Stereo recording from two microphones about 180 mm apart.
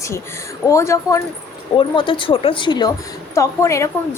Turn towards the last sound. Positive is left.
turn(degrees=15)  # may be behind; listen again after turning